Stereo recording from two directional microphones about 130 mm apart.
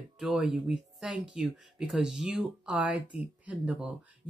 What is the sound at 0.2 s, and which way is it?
Speech, 5° right (ahead or behind).